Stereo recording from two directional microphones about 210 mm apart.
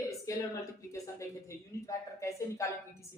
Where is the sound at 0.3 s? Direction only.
15° left (ahead or behind).